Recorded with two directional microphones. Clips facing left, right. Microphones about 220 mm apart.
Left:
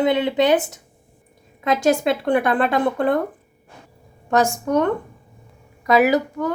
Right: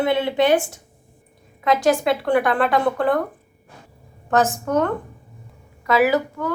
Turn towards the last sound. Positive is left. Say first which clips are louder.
# left 1 dB
turn(degrees=15)  # may be behind; listen again after turning